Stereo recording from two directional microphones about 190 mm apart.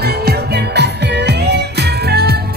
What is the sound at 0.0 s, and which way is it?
Music, 60° right (ahead or behind).